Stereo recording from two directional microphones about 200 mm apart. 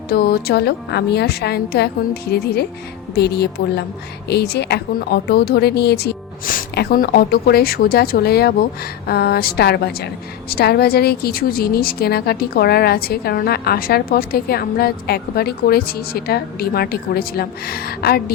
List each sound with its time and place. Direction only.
0.1 s a woman's voice: 50° left (ahead or behind)